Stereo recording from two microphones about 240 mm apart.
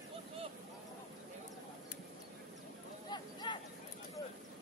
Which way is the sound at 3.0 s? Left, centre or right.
Centre.